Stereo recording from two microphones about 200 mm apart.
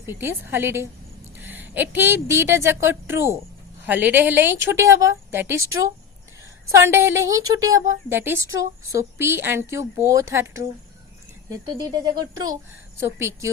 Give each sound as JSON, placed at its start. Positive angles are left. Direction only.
{"t": 0.0, "sound": "a woman's voice", "side_deg": -10}
{"t": 6.7, "sound": "speech", "side_deg": -15}